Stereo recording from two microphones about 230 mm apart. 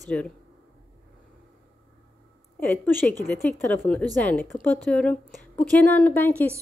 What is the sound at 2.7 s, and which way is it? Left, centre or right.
A woman's voice, centre.